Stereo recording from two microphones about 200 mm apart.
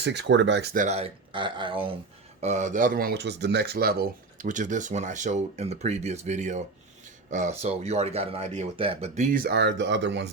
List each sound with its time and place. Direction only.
0.0 s speech: 60° right (ahead or behind)
0.9 s speech: 30° right (ahead or behind)
2.4 s speech: 35° right (ahead or behind)
9.3 s speech: 50° right (ahead or behind)